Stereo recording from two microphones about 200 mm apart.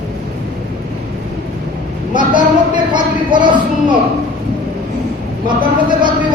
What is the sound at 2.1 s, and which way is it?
A woman's voice, 25° right (ahead or behind).